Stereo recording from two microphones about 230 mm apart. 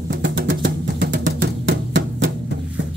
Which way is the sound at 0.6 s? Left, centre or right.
Right.